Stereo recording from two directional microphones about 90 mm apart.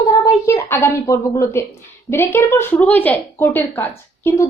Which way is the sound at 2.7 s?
20° left (ahead or behind).